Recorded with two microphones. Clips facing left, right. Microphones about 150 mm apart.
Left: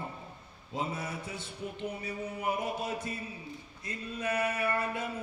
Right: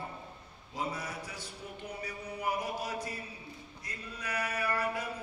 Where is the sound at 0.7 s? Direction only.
25° left (ahead or behind).